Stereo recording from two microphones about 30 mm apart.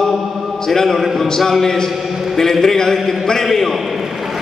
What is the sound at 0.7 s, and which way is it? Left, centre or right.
A man's voice, centre.